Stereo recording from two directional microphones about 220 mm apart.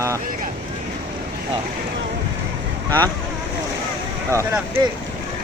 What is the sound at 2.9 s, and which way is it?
Speech, 15° right (ahead or behind).